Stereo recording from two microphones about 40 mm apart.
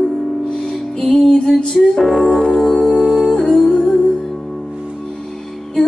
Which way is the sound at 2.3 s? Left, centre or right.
Left.